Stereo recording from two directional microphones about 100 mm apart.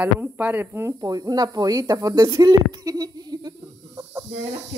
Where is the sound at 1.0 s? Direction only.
40° right (ahead or behind).